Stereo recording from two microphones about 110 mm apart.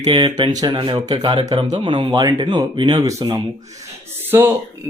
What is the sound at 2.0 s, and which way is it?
Speech, 35° right (ahead or behind).